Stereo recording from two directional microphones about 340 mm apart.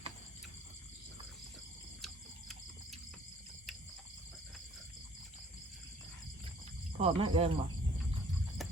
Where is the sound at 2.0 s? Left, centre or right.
Centre.